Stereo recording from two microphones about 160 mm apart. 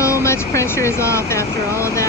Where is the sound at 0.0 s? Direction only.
20° left (ahead or behind).